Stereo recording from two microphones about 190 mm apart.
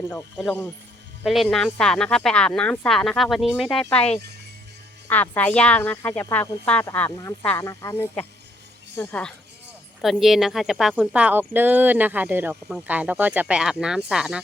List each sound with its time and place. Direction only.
0.1 s speech: 10° left (ahead or behind)
1.2 s speech: centre (ahead or behind)
3.9 s speech: 35° left (ahead or behind)
5.0 s speech: 10° left (ahead or behind)